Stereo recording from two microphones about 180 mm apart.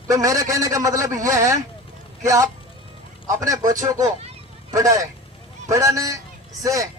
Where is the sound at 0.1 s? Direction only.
20° right (ahead or behind).